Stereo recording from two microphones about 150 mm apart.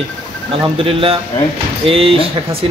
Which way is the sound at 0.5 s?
40° right (ahead or behind).